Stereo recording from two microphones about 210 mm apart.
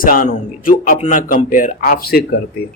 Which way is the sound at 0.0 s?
40° left (ahead or behind).